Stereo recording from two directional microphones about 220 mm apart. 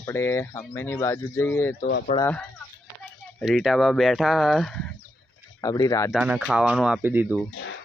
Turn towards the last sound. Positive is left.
turn(degrees=60)  # may be behind; listen again after turning